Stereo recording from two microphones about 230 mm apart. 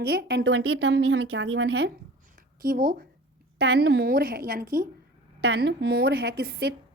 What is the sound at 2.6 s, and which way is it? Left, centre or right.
A woman's voice, right.